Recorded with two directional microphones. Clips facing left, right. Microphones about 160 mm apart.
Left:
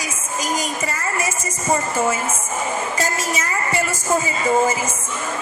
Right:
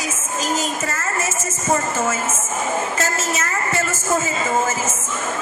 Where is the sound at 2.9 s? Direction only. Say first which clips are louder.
Even; 10° left (ahead or behind).